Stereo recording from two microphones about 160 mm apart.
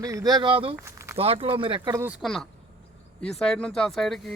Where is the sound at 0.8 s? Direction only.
15° right (ahead or behind).